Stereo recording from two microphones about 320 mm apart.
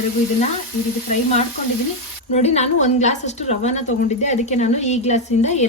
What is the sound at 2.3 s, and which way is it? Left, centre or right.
A woman's voice, centre.